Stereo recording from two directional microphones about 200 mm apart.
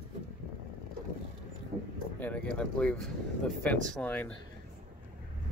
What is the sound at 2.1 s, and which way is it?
Speech, 5° left (ahead or behind).